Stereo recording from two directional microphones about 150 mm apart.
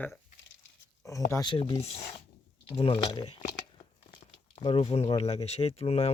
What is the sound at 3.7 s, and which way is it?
Crumpling, 30° left (ahead or behind).